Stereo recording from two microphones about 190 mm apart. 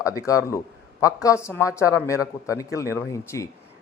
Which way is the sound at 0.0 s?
15° left (ahead or behind).